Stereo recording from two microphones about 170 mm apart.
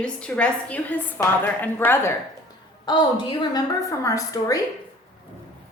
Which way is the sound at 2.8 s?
25° left (ahead or behind).